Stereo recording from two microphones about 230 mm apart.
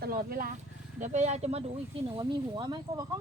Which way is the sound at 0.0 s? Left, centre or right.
Right.